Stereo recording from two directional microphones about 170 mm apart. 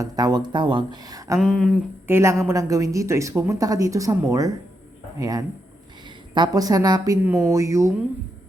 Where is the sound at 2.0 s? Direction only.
15° right (ahead or behind).